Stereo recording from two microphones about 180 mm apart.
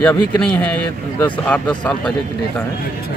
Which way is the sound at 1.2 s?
10° left (ahead or behind).